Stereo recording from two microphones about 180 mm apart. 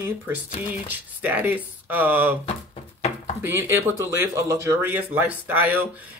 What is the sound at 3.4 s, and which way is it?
Speech, 15° right (ahead or behind).